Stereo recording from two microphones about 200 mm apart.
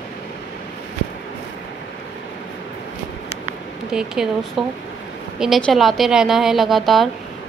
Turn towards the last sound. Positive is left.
turn(degrees=0)  # may be behind; listen again after turning